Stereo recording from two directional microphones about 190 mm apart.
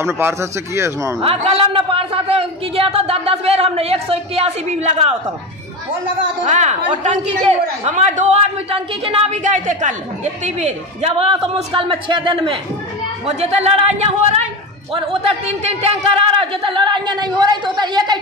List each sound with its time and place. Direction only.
0.0 s speech: 15° right (ahead or behind)
1.2 s a man's voice: 30° right (ahead or behind)
6.5 s a man's voice: 40° right (ahead or behind); by 18.2 s 20° right (ahead or behind)